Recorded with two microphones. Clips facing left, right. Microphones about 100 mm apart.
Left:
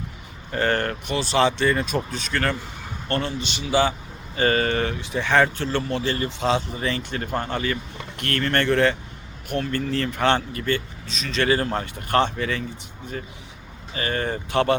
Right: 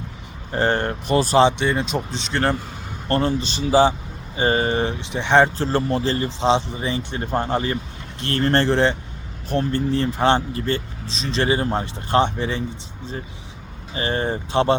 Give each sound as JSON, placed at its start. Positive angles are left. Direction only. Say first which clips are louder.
{"t": 0.5, "sound": "speech", "louder": "right 2 dB", "side_deg": -25}
{"t": 1.0, "sound": "speech", "louder": "right 7 dB", "side_deg": -40}
{"t": 1.5, "sound": "speech", "louder": "right 1 dB", "side_deg": -20}
{"t": 4.4, "sound": "speech", "louder": "right 1 dB", "side_deg": -20}
{"t": 5.6, "sound": "speech", "louder": "right 3 dB", "side_deg": -35}
{"t": 13.9, "sound": "speech", "louder": "right 3 dB", "side_deg": -25}